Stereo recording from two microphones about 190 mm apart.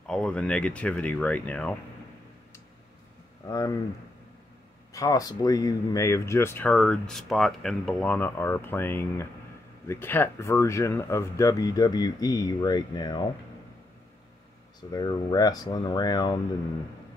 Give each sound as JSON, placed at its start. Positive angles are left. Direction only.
{"t": 0.0, "sound": "speech", "side_deg": 5}
{"t": 3.4, "sound": "speech", "side_deg": 20}
{"t": 4.9, "sound": "speech", "side_deg": 20}
{"t": 14.9, "sound": "speech", "side_deg": 20}